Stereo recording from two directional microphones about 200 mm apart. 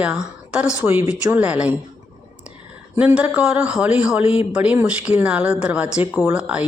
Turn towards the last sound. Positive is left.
turn(degrees=-5)  # may be behind; listen again after turning